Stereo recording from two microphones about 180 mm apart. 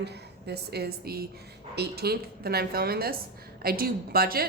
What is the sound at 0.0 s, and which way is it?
A woman's voice, 65° right (ahead or behind).